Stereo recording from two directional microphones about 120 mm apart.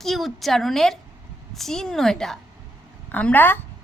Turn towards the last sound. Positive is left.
turn(degrees=15)  # may be behind; listen again after turning